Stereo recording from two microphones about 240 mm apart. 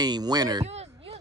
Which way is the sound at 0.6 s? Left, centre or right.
Right.